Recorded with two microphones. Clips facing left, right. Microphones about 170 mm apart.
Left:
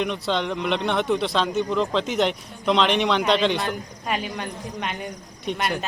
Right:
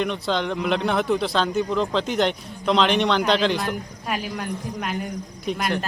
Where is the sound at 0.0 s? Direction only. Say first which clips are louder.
Right 1 dB; centre (ahead or behind).